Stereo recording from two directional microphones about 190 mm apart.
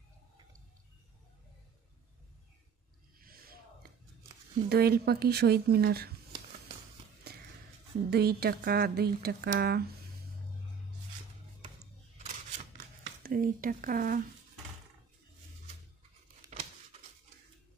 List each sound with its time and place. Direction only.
3.2 s a sound: 50° right (ahead or behind)
4.6 s speech: 55° right (ahead or behind)
7.3 s walk: 55° right (ahead or behind)
8.1 s speech: 55° right (ahead or behind)
13.2 s speech: 50° right (ahead or behind)
16.4 s tearing: 20° right (ahead or behind)